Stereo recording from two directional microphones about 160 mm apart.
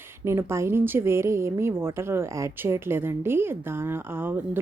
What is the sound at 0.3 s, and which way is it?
A woman's voice, 15° right (ahead or behind).